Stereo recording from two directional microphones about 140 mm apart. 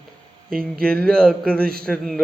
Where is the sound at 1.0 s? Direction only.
5° left (ahead or behind).